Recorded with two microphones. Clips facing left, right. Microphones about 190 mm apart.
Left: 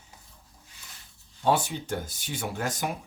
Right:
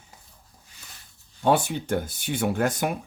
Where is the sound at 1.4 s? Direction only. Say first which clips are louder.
Right 3 dB; 60° right (ahead or behind).